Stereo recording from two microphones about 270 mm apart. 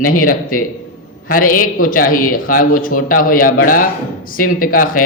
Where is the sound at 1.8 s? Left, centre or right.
Left.